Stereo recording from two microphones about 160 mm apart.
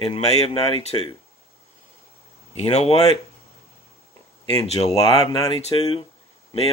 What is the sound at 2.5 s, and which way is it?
Speech, 40° left (ahead or behind).